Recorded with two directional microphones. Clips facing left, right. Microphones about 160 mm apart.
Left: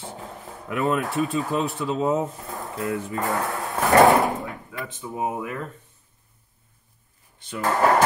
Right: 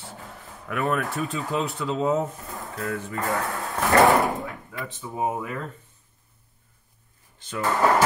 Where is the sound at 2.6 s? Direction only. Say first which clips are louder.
Left 3 dB; 20° left (ahead or behind).